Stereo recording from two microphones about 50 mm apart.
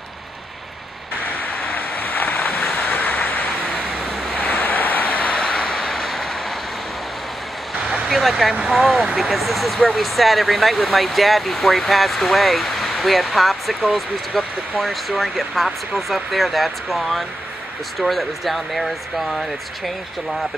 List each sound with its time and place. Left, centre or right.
1.2 s waves: left
2.9 s vehicle: left
4.4 s vehicle: left; by 5.9 s centre
5.9 s vehicle: centre
8.1 s speech: centre